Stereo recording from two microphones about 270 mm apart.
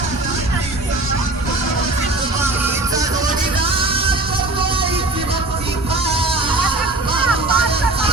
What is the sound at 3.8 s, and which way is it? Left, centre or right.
Music, centre.